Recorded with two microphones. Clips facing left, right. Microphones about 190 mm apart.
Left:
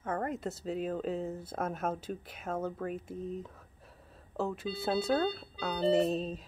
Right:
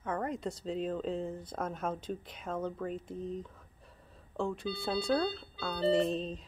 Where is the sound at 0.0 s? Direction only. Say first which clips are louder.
Left 1 dB; 45° left (ahead or behind).